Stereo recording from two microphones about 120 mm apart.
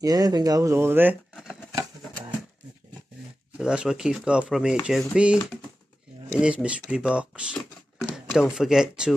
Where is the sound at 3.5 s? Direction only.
5° right (ahead or behind).